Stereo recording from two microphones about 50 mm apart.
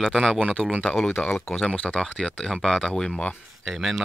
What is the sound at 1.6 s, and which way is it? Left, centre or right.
Speech, centre.